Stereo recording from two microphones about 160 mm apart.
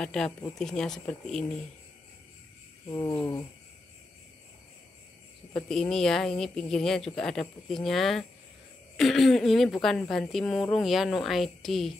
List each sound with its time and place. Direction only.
0.0 s a woman's voice: 5° left (ahead or behind)
2.9 s a sound: 25° left (ahead or behind)
5.5 s a woman's voice: 5° left (ahead or behind)